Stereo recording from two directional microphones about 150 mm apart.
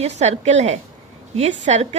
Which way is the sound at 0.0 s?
50° right (ahead or behind).